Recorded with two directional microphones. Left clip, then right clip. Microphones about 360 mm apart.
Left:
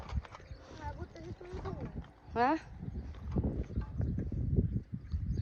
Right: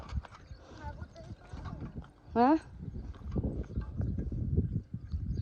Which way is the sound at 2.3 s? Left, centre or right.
Centre.